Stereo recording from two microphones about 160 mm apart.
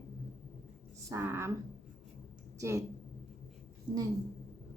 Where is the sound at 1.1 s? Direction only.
15° right (ahead or behind).